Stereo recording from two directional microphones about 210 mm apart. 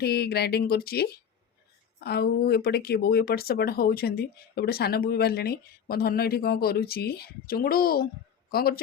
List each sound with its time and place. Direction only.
0.0 s speech: 50° left (ahead or behind)